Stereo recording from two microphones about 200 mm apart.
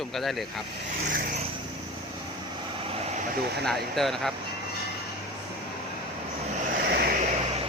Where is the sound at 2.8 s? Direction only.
30° right (ahead or behind).